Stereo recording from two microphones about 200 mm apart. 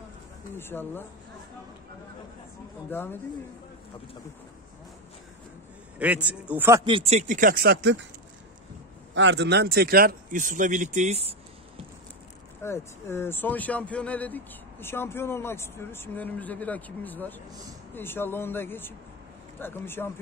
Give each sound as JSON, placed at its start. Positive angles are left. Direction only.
{"t": 0.6, "sound": "speech", "side_deg": 10}
{"t": 2.9, "sound": "speech", "side_deg": 10}
{"t": 5.9, "sound": "a man's voice", "side_deg": -5}
{"t": 6.8, "sound": "speech", "side_deg": -30}
{"t": 9.1, "sound": "speech", "side_deg": -65}
{"t": 12.6, "sound": "speech", "side_deg": 10}
{"t": 17.5, "sound": "speech", "side_deg": -20}
{"t": 17.9, "sound": "speech", "side_deg": 10}